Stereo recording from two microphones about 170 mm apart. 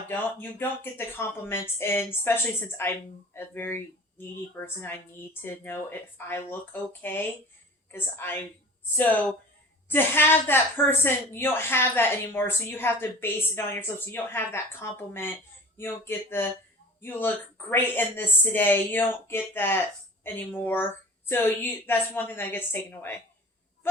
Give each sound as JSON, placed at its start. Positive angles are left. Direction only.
{"t": 0.1, "sound": "a woman's voice", "side_deg": 10}